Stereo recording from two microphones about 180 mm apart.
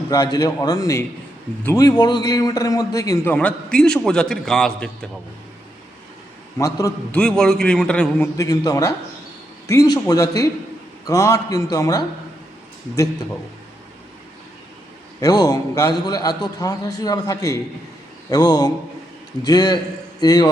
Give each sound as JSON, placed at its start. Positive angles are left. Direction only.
{"t": 0.1, "sound": "a man's voice", "side_deg": 20}
{"t": 3.3, "sound": "a man's voice", "side_deg": 5}
{"t": 6.6, "sound": "a man's voice", "side_deg": 20}
{"t": 7.1, "sound": "a man's voice", "side_deg": 5}
{"t": 8.4, "sound": "a man's voice", "side_deg": 20}
{"t": 15.2, "sound": "a man's voice", "side_deg": 20}